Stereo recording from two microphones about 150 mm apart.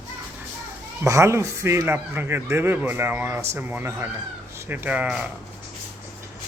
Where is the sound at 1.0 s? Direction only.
20° right (ahead or behind).